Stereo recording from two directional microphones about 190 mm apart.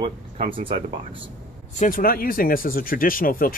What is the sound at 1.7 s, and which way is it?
Speech, 45° left (ahead or behind).